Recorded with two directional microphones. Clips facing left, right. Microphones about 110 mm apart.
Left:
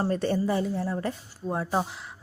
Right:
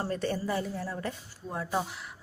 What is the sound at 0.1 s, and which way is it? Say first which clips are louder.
Speech: left 5 dB; 30° left (ahead or behind).